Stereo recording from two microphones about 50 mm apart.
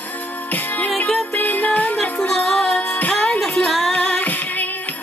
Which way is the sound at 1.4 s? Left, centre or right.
Left.